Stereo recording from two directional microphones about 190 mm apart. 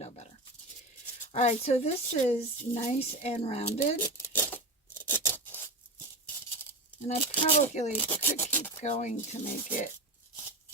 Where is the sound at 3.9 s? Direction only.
10° left (ahead or behind).